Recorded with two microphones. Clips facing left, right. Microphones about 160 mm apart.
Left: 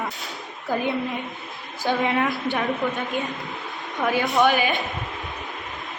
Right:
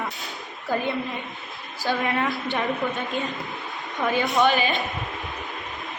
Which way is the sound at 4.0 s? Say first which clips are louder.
Left 1 dB; 5° left (ahead or behind).